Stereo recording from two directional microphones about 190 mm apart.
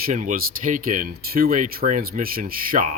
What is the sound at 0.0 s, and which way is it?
Speech, 45° right (ahead or behind).